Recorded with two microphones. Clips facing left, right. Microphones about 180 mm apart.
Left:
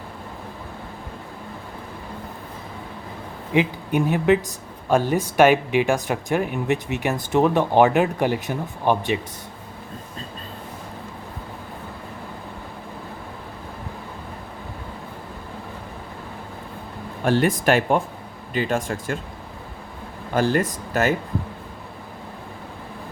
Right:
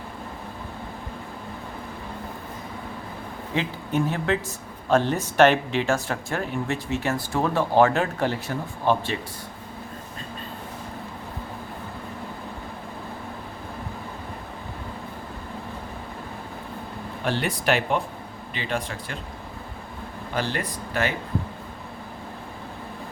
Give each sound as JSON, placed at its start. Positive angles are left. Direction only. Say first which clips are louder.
{"t": 3.5, "sound": "speech", "louder": "left 6 dB", "side_deg": 15}
{"t": 17.2, "sound": "speech", "louder": "left 6 dB", "side_deg": 45}
{"t": 20.3, "sound": "speech", "louder": "left 8 dB", "side_deg": 45}